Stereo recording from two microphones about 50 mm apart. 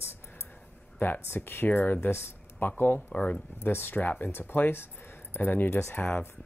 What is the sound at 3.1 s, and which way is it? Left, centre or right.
Speech, left.